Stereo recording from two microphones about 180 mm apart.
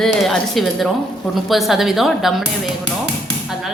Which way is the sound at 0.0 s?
Centre (ahead or behind).